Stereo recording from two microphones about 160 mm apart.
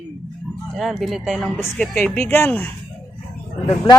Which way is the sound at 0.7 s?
Centre (ahead or behind).